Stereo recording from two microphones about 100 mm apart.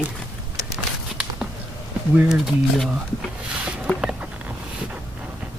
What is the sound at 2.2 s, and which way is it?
Speech, 5° right (ahead or behind).